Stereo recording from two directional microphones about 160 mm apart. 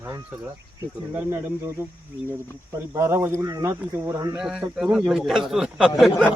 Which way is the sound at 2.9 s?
20° right (ahead or behind).